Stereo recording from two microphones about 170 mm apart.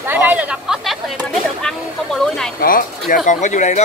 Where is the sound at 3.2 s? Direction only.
45° left (ahead or behind).